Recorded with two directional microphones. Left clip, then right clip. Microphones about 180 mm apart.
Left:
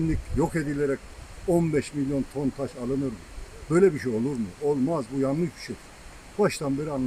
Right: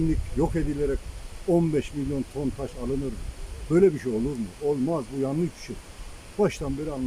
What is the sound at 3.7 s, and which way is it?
Speech, 10° right (ahead or behind).